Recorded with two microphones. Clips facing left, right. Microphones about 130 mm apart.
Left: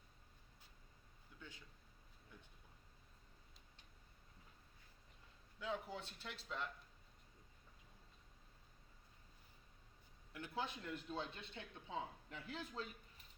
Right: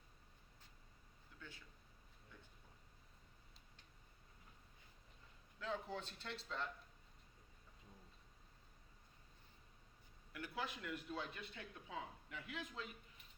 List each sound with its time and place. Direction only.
1.4 s speech: 15° left (ahead or behind)
5.5 s speech: 5° left (ahead or behind)
10.3 s speech: 25° left (ahead or behind)